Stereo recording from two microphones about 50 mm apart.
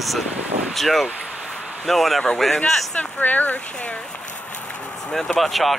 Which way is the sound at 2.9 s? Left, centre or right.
Left.